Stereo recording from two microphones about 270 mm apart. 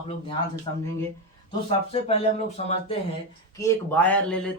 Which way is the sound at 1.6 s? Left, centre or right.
Left.